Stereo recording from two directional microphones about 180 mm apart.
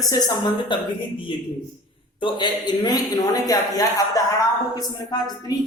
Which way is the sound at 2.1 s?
25° left (ahead or behind).